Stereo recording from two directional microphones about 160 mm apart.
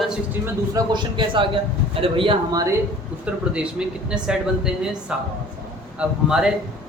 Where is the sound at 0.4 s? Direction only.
25° right (ahead or behind).